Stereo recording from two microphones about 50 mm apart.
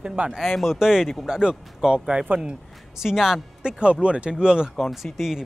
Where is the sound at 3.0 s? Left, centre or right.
Centre.